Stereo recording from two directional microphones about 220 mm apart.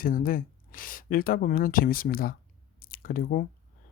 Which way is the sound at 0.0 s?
40° left (ahead or behind).